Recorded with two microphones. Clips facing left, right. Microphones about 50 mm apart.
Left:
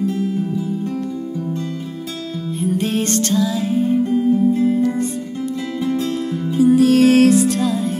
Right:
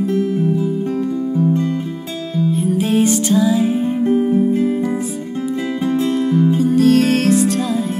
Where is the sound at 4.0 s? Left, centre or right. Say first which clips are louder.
Right 1 dB; right.